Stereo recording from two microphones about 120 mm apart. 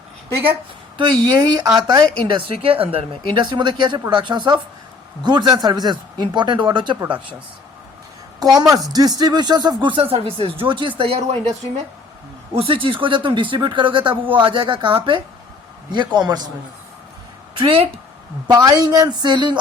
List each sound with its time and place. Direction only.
0.9 s speech: 40° right (ahead or behind)
2.6 s speech: 50° right (ahead or behind)
8.5 s speech: 30° right (ahead or behind); by 11.5 s 65° right (ahead or behind)
12.5 s speech: 50° right (ahead or behind)
17.6 s speech: 50° right (ahead or behind)
18.5 s speech: 30° right (ahead or behind)